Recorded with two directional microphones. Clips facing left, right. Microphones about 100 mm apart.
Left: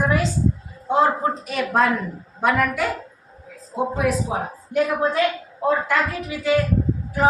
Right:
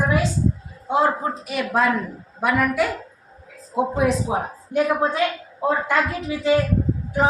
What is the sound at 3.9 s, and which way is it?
A woman's voice, 20° right (ahead or behind).